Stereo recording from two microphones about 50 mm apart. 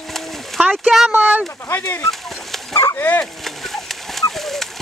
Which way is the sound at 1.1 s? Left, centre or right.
Right.